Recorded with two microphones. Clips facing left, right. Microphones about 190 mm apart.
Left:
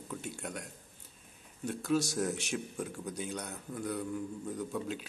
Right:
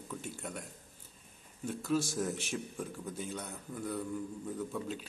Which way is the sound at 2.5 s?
5° left (ahead or behind).